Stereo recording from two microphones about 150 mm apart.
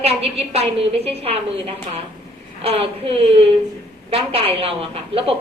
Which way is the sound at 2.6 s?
40° right (ahead or behind).